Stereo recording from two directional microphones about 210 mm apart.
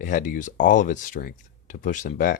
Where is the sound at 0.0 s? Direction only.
40° left (ahead or behind).